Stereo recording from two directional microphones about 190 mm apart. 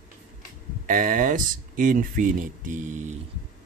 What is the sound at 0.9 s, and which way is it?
Speech, 45° right (ahead or behind).